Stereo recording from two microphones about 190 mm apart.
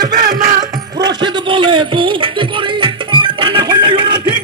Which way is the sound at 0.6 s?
20° right (ahead or behind).